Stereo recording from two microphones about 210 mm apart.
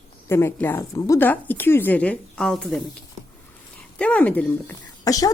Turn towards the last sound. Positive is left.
turn(degrees=15)  # may be behind; listen again after turning